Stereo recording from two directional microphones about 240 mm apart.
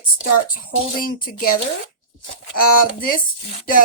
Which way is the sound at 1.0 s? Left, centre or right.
Left.